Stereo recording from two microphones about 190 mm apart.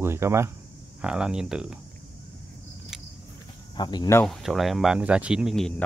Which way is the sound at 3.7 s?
20° left (ahead or behind).